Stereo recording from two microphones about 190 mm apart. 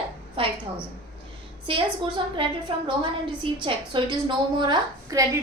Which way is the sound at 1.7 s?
30° right (ahead or behind).